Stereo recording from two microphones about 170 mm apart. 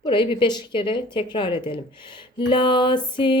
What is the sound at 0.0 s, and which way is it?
Music, 30° left (ahead or behind).